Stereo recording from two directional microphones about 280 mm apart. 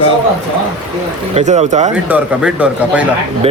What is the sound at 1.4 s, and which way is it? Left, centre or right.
Speech, right.